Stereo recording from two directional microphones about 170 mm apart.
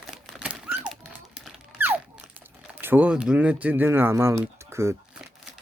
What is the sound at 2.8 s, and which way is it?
Speech, 10° right (ahead or behind).